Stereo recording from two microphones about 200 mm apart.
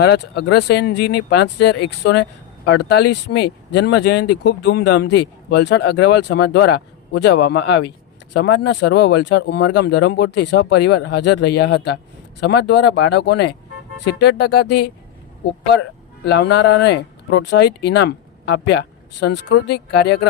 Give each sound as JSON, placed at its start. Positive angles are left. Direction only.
{"t": 0.0, "sound": "speech", "side_deg": 55}